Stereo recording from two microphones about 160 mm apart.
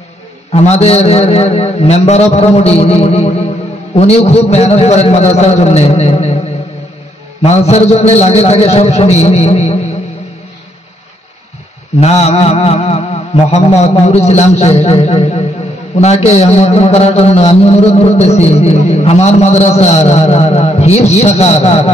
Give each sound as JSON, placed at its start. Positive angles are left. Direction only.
{"t": 0.5, "sound": "a man's voice", "side_deg": 40}
{"t": 7.4, "sound": "a man's voice", "side_deg": 40}
{"t": 12.0, "sound": "a man's voice", "side_deg": 40}